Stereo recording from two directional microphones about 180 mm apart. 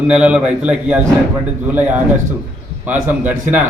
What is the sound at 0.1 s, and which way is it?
A man's voice, 5° right (ahead or behind).